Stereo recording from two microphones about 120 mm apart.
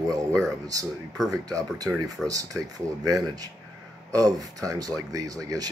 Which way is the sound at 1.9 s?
20° right (ahead or behind).